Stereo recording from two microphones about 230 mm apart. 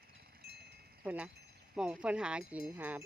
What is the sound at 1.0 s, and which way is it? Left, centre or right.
A woman's voice, centre.